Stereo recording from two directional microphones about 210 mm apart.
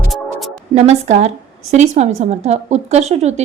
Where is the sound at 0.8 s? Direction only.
30° right (ahead or behind).